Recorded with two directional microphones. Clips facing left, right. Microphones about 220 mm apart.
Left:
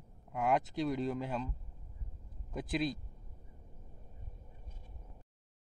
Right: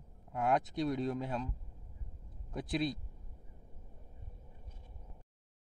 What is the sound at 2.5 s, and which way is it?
Speech, centre (ahead or behind).